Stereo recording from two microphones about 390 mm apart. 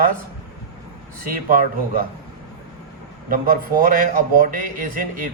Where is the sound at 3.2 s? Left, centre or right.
Right.